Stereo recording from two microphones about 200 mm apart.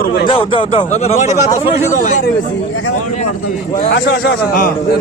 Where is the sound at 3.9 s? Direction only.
60° left (ahead or behind).